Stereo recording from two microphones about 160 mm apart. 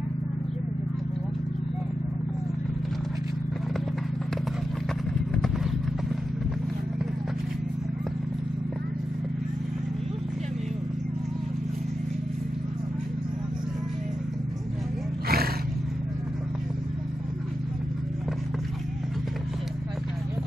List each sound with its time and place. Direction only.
5.3 s vehicle: centre (ahead or behind)
15.2 s roaring cats: 75° right (ahead or behind)